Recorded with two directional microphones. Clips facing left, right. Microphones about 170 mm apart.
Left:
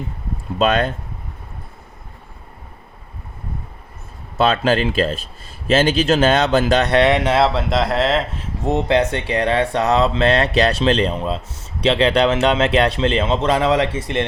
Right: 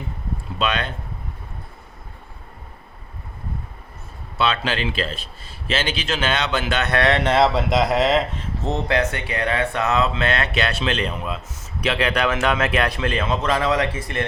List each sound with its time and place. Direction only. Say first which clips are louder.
0.6 s speech: left 7 dB; 45° left (ahead or behind)
4.4 s speech: left 6 dB; 45° left (ahead or behind)
7.0 s speech: left 2 dB; 10° left (ahead or behind)
8.6 s speech: left 5 dB; 15° left (ahead or behind)
9.0 s a man's voice: left 5 dB; 30° left (ahead or behind)